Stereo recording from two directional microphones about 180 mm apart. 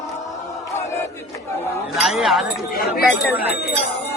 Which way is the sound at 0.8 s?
15° left (ahead or behind).